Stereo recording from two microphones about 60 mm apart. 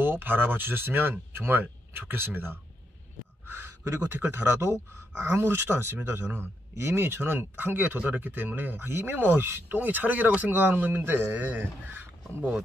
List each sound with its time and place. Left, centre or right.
0.0 s speech: right
3.4 s a sound: right
4.1 s speech: right
9.8 s speech: right